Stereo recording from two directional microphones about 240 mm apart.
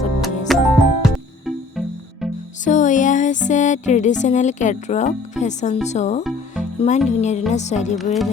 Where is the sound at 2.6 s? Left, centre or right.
Left.